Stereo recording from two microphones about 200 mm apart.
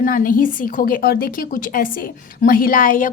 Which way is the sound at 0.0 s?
45° left (ahead or behind).